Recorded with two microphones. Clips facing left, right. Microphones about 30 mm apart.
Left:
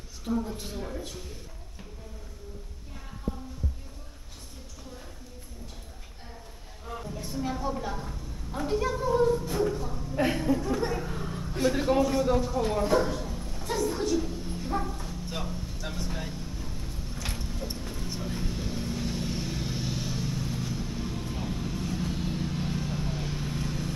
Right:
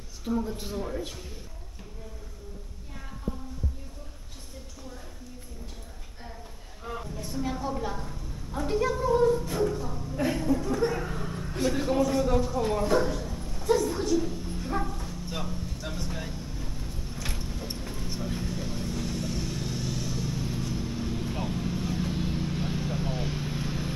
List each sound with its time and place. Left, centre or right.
0.2 s a man's voice: centre
7.1 s a sound: centre
10.1 s a sound: left
10.6 s speech: centre
11.0 s vehicle: centre
20.3 s vehicle: centre